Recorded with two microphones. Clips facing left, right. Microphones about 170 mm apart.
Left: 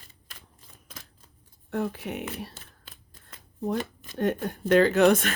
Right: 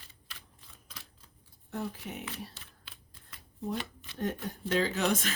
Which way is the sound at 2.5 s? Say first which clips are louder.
Left 4 dB; 45° left (ahead or behind).